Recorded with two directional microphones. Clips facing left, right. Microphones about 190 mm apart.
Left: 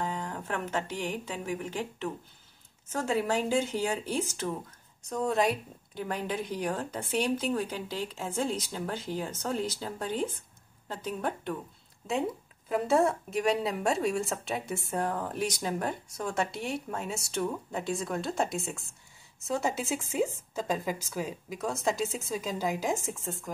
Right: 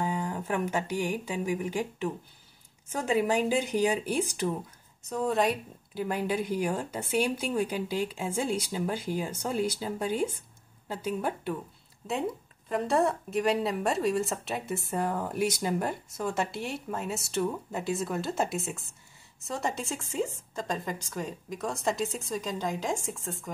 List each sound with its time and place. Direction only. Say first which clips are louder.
0.0 s speech: right 3 dB; 10° right (ahead or behind)
5.0 s speech: right 1 dB; centre (ahead or behind)